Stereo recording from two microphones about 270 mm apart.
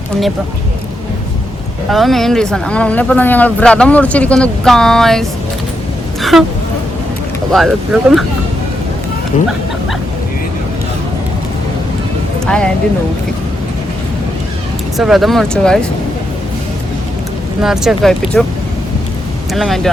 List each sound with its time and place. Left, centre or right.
1.9 s speech: centre
6.3 s speech: centre
7.5 s speech: centre
12.5 s speech: centre
14.9 s speech: centre
17.6 s speech: centre
19.5 s speech: centre